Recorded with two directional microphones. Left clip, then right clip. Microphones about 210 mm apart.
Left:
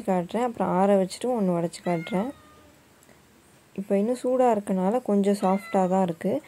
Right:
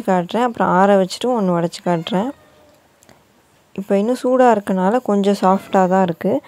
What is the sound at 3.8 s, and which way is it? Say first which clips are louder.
A woman's voice: right 8 dB; 20° right (ahead or behind).